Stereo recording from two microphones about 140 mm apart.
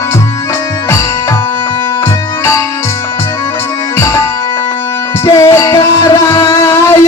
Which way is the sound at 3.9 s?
20° left (ahead or behind).